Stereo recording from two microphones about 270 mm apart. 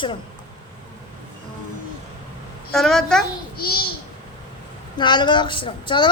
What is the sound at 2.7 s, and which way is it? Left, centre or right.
Speech, centre.